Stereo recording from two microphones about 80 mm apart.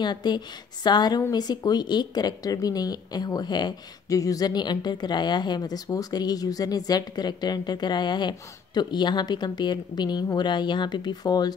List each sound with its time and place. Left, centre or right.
0.0 s a woman's voice: left
4.1 s a woman's voice: left